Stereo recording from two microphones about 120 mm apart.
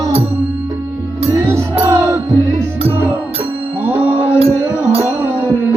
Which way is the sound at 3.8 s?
15° right (ahead or behind).